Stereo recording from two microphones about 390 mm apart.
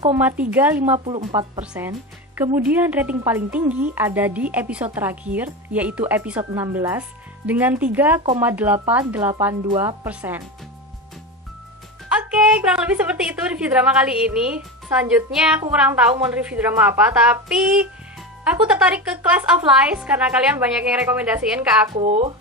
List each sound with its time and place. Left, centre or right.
0.0 s speech: centre
12.2 s speech: centre
18.5 s speech: centre
21.9 s speech: centre